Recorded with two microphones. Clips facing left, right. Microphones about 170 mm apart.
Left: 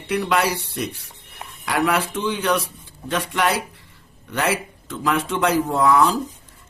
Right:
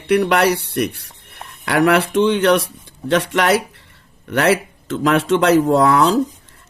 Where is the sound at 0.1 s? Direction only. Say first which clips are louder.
Right 6 dB; 70° right (ahead or behind).